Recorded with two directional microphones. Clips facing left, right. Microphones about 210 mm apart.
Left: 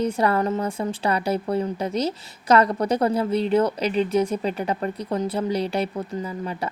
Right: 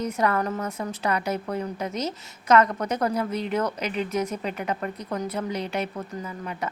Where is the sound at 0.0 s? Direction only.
30° left (ahead or behind).